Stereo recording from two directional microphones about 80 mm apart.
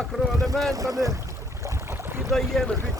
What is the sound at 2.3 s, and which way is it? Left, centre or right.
Speech, centre.